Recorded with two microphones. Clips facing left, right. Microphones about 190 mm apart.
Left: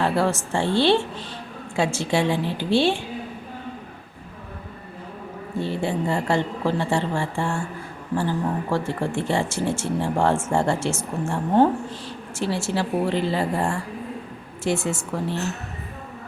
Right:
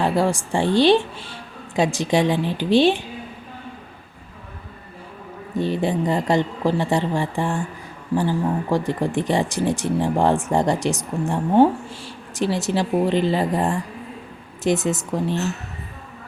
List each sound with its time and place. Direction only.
0.0 s speech: 15° right (ahead or behind)
5.5 s speech: 15° right (ahead or behind)